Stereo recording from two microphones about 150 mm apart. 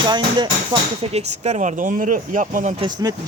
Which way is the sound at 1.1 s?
45° right (ahead or behind).